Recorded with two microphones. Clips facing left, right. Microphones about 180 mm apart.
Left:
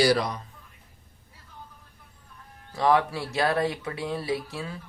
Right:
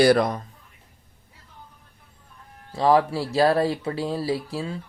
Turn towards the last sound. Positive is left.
turn(degrees=-30)  # may be behind; listen again after turning